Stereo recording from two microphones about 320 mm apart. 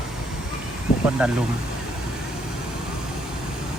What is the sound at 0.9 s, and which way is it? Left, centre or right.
Vehicle, centre.